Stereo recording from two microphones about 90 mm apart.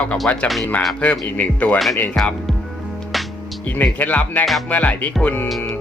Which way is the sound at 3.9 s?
20° left (ahead or behind).